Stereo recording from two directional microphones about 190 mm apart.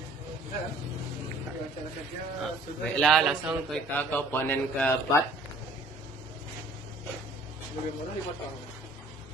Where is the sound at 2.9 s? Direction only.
Centre (ahead or behind).